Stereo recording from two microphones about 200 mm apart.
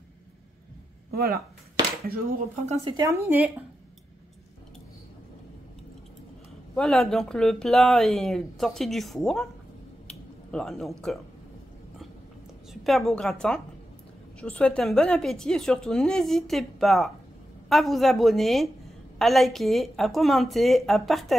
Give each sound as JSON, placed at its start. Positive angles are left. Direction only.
{"t": 1.1, "sound": "speech", "side_deg": -50}
{"t": 2.7, "sound": "speech", "side_deg": -30}
{"t": 3.0, "sound": "speech", "side_deg": -15}
{"t": 6.7, "sound": "speech", "side_deg": 5}
{"t": 10.0, "sound": "a sound", "side_deg": 5}
{"t": 12.8, "sound": "speech", "side_deg": 0}